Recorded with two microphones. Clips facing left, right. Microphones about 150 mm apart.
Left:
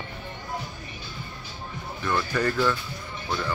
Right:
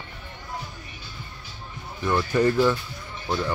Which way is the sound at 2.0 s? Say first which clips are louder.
Right 4 dB; 20° right (ahead or behind).